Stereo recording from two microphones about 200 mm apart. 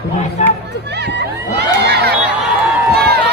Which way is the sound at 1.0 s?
60° right (ahead or behind).